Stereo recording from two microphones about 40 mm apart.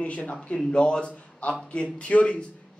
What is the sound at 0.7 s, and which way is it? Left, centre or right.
Speech, left.